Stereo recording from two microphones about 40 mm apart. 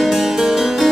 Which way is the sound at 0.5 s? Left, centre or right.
Centre.